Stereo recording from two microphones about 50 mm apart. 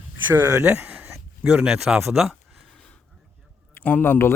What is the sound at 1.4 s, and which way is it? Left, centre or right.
Speech, centre.